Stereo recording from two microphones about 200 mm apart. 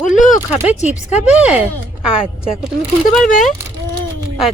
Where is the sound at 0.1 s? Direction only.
40° left (ahead or behind).